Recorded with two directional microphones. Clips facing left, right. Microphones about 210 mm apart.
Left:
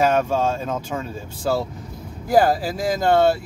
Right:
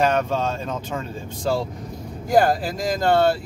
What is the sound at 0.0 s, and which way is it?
Speech, 10° left (ahead or behind).